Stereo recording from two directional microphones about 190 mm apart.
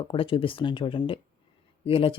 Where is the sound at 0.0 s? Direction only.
30° left (ahead or behind).